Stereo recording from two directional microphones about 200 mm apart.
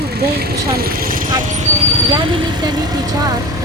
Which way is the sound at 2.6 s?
20° right (ahead or behind).